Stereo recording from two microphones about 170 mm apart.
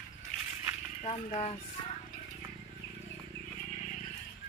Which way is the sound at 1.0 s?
40° left (ahead or behind).